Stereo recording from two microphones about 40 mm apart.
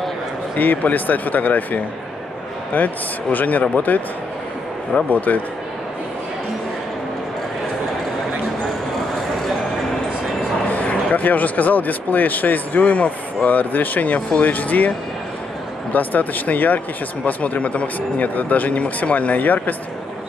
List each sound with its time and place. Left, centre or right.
0.6 s speech: left
5.1 s speech: left
10.7 s speech: left
15.9 s speech: left